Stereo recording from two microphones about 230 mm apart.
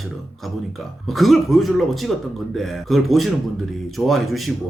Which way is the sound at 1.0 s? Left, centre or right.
Centre.